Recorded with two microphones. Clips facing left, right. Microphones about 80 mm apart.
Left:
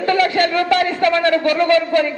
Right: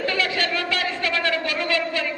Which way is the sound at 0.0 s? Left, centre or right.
Left.